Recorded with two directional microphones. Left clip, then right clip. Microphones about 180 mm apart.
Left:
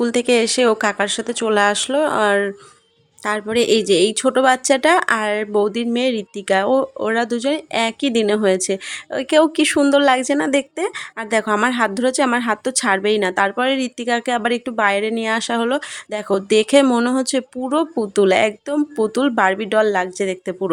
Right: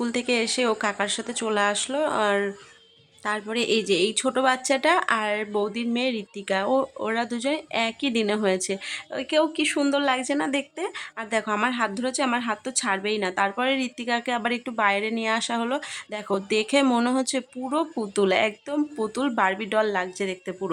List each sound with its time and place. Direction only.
0.0 s a woman's voice: 30° left (ahead or behind)